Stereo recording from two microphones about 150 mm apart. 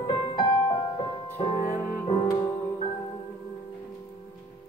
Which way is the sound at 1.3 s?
45° left (ahead or behind).